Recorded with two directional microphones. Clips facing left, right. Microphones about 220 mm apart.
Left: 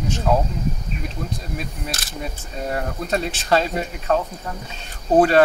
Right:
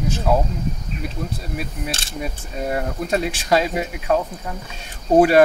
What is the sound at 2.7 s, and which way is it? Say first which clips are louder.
Speech: right 2 dB; 10° right (ahead or behind).